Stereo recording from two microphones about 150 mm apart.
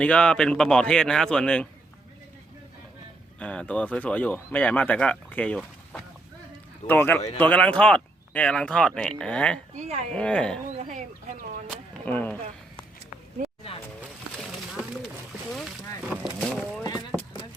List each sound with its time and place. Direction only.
0.0 s speech: 5° left (ahead or behind)
3.4 s speech: 10° left (ahead or behind)
9.7 s speech: 50° right (ahead or behind)
10.1 s speech: 5° left (ahead or behind)
10.8 s speech: 50° right (ahead or behind)
12.0 s speech: 10° left (ahead or behind)
15.5 s a sound: centre (ahead or behind)